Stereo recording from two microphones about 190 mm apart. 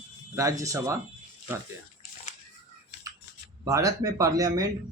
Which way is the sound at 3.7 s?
15° right (ahead or behind).